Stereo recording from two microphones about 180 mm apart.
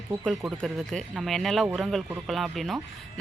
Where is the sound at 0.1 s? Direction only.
5° right (ahead or behind).